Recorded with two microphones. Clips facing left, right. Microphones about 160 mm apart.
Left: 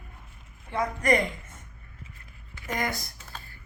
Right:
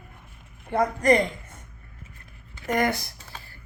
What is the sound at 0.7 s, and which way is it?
Speech, 45° right (ahead or behind).